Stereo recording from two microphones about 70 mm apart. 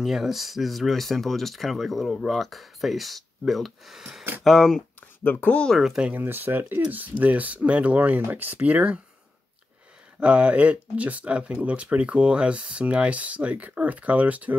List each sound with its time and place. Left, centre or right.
0.0 s speech: centre
5.2 s speech: left
5.8 s speech: centre
6.0 s speech: right
10.2 s speech: centre